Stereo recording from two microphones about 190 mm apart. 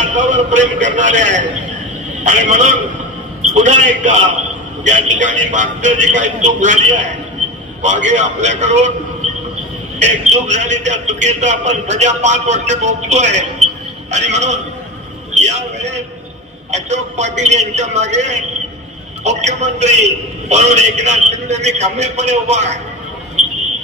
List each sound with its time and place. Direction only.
0.0 s a man's voice: 40° right (ahead or behind)
9.9 s a man's voice: 35° right (ahead or behind)